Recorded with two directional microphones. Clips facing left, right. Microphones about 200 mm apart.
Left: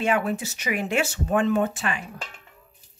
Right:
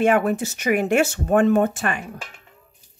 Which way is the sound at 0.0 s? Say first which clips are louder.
Right 6 dB; 50° right (ahead or behind).